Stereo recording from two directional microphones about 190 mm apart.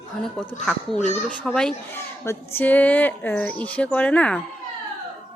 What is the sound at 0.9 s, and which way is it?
Speech, 40° left (ahead or behind).